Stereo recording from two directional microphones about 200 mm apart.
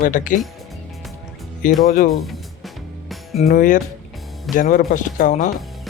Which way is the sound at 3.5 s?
40° left (ahead or behind).